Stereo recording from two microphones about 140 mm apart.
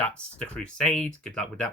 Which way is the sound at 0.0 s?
10° left (ahead or behind).